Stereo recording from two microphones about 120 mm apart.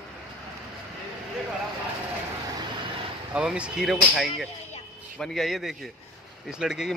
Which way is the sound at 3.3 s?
10° right (ahead or behind).